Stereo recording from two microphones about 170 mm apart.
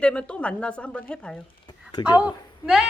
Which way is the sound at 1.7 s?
25° left (ahead or behind).